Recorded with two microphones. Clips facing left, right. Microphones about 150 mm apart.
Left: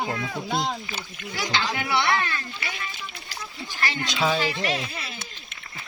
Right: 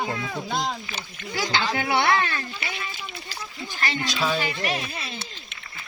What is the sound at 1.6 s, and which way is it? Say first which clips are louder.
Speech: right 2 dB; 15° right (ahead or behind).